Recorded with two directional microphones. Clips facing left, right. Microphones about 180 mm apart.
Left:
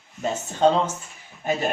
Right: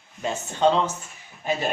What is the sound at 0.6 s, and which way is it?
Speech, 45° left (ahead or behind).